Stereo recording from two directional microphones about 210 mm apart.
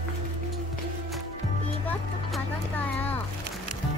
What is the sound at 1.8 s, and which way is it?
Vehicle, 10° left (ahead or behind).